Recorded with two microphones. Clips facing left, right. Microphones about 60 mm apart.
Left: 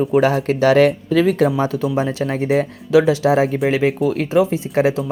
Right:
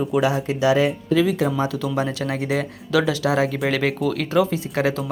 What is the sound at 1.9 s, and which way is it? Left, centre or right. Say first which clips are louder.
Speech: left 4 dB; left.